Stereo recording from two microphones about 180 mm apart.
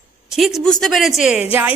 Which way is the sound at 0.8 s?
Centre (ahead or behind).